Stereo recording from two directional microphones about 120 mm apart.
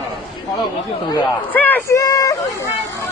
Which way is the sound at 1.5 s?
15° left (ahead or behind).